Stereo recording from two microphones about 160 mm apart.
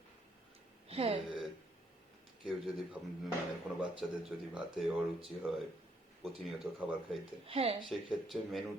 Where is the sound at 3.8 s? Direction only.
5° right (ahead or behind).